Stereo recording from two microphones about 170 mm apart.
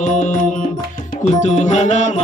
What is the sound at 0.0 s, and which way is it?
Music, 45° left (ahead or behind).